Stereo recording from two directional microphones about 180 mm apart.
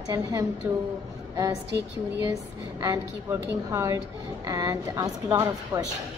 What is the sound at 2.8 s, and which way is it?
A woman's voice, 20° right (ahead or behind).